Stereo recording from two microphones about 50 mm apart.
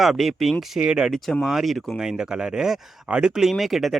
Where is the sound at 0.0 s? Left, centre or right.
Centre.